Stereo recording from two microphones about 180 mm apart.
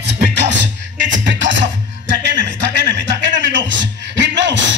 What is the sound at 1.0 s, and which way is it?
Music, 85° right.